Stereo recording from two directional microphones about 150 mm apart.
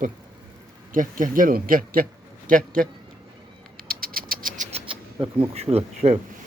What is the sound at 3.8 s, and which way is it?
Mechanisms, 75° right (ahead or behind).